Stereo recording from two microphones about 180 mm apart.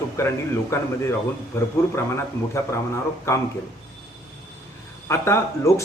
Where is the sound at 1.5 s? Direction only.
15° left (ahead or behind).